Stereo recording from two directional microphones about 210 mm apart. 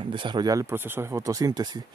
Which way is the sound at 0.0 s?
25° right (ahead or behind).